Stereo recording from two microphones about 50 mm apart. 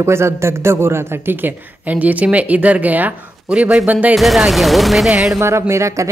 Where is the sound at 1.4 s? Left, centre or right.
Right.